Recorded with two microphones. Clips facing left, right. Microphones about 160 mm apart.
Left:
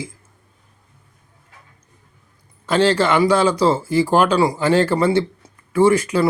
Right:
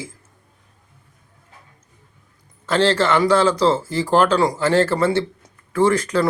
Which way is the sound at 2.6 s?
10° left (ahead or behind).